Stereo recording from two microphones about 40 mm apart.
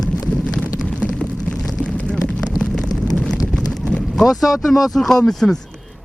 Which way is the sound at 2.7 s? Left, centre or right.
Centre.